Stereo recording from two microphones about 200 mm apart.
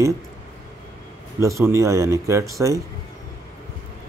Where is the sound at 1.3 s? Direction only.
15° right (ahead or behind).